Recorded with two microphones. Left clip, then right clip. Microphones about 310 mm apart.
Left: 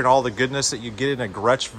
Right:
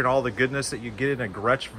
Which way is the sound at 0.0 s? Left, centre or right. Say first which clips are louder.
Left 4 dB; centre.